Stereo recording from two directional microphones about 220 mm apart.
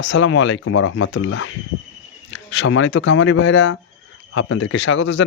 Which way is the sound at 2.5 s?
60° left (ahead or behind).